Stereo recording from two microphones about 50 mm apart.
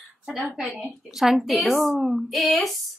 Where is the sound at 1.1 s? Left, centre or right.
Centre.